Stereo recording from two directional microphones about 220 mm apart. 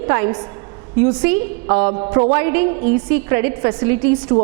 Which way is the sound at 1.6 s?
25° right (ahead or behind).